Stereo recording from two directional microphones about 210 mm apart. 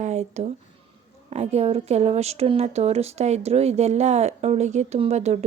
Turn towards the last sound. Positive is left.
turn(degrees=-30)  # may be behind; listen again after turning